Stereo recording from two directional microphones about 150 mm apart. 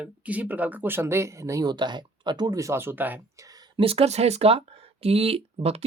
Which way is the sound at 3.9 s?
40° right (ahead or behind).